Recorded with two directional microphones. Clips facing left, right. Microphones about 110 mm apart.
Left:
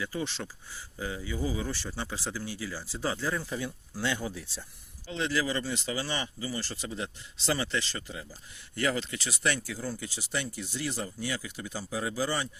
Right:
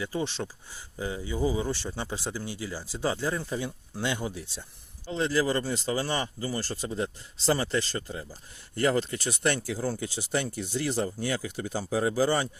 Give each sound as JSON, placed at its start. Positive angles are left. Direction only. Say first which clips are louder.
{"t": 0.0, "sound": "speech", "louder": "right 3 dB", "side_deg": -20}
{"t": 5.1, "sound": "speech", "louder": "right 4 dB", "side_deg": -35}
{"t": 10.0, "sound": "speech", "louder": "right 5 dB", "side_deg": -40}